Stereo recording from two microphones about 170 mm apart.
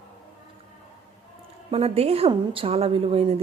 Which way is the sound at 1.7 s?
35° right (ahead or behind).